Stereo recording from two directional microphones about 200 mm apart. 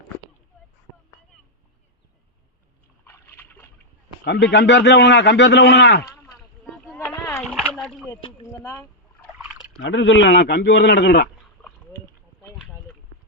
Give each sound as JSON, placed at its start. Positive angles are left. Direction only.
{"t": 3.1, "sound": "boat", "side_deg": 10}
{"t": 4.2, "sound": "a man's voice", "side_deg": 60}
{"t": 7.0, "sound": "splash", "side_deg": 15}
{"t": 7.5, "sound": "a sound", "side_deg": 0}
{"t": 8.1, "sound": "speech", "side_deg": 15}
{"t": 9.8, "sound": "a man's voice", "side_deg": 70}